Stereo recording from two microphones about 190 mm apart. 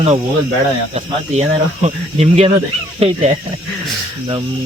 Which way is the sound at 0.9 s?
35° right (ahead or behind).